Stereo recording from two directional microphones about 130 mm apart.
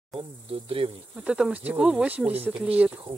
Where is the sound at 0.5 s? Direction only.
45° right (ahead or behind).